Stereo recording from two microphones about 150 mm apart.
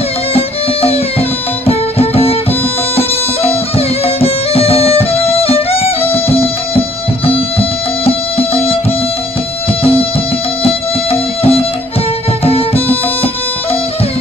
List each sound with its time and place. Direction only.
0.3 s music: 40° left (ahead or behind)
8.0 s music: 40° left (ahead or behind)
10.6 s music: 40° left (ahead or behind)